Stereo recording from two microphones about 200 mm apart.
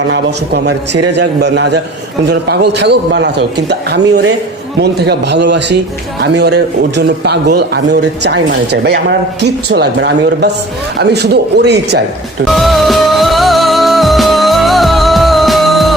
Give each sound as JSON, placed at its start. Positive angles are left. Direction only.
{"t": 0.1, "sound": "a man's voice", "side_deg": -55}
{"t": 12.5, "sound": "music", "side_deg": 0}